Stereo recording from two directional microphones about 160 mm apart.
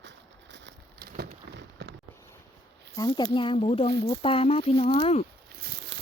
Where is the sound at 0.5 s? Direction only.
80° right.